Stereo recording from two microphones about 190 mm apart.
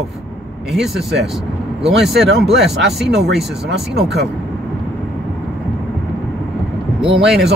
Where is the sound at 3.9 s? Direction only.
60° right (ahead or behind).